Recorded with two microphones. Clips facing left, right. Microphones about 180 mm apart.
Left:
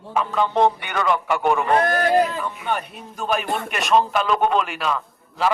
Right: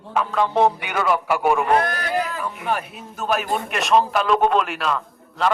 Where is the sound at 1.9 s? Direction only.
45° left (ahead or behind).